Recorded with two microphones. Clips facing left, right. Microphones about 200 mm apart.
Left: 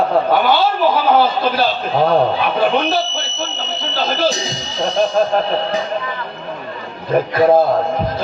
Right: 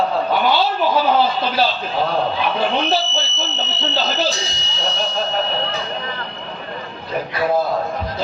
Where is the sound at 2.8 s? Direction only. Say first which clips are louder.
Left 1 dB; 55° left (ahead or behind).